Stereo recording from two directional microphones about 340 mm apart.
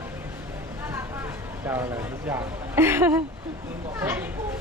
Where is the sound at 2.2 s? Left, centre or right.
Centre.